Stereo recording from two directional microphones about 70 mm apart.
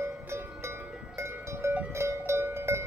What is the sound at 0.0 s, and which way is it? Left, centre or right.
Music, right.